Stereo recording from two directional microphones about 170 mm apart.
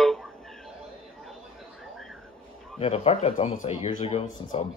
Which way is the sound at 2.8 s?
35° left (ahead or behind).